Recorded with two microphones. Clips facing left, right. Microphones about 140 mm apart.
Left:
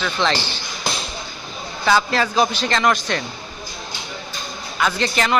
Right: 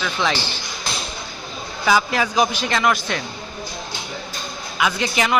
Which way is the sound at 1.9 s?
10° right (ahead or behind).